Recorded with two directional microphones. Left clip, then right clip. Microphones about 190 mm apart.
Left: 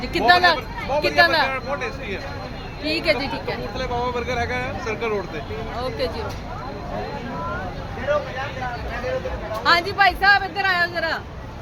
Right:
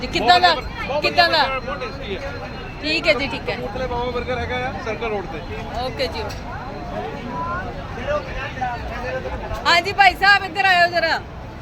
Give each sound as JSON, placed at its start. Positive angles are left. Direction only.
{"t": 0.0, "sound": "speech", "side_deg": 10}
{"t": 2.8, "sound": "speech", "side_deg": 10}
{"t": 3.8, "sound": "speech", "side_deg": 20}
{"t": 9.6, "sound": "speech", "side_deg": 5}